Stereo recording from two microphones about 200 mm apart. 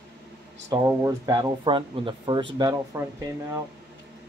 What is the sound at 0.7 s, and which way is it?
Speech, 15° right (ahead or behind).